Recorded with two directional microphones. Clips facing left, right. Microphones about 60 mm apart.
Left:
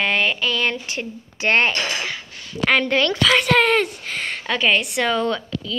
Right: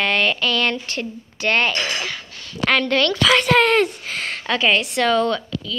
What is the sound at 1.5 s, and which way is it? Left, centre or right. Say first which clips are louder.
Speech: left 1 dB; left.